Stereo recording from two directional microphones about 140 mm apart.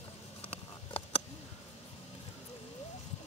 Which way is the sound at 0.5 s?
45° left (ahead or behind).